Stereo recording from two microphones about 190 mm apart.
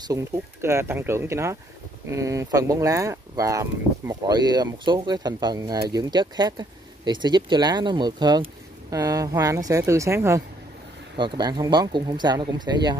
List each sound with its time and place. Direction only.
0.0 s speech: 15° right (ahead or behind)